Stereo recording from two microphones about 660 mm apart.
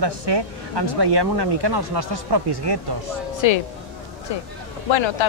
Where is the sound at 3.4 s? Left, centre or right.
Left.